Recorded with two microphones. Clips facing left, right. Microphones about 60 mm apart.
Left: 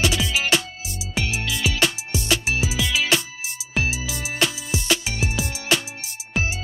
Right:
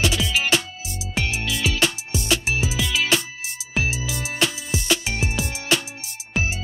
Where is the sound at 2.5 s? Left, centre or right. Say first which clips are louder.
Even; centre.